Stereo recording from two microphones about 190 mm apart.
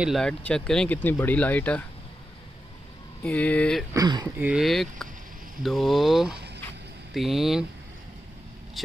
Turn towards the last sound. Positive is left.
turn(degrees=0)  # may be behind; listen again after turning